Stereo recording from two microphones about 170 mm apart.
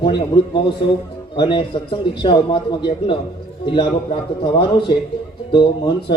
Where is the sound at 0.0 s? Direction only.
30° left (ahead or behind).